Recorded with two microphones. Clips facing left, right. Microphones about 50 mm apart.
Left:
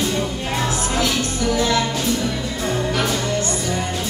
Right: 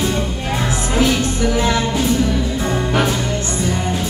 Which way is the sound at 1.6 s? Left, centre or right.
Right.